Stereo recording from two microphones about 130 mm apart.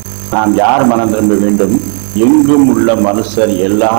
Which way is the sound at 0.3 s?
20° right (ahead or behind).